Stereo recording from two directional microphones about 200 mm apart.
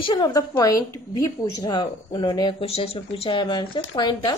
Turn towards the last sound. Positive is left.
turn(degrees=20)  # may be behind; listen again after turning